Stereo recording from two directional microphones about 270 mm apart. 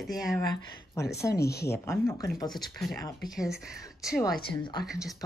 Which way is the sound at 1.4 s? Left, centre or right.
Left.